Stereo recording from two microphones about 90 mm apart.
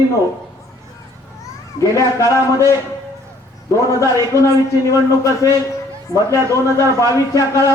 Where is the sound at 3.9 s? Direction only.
35° left (ahead or behind).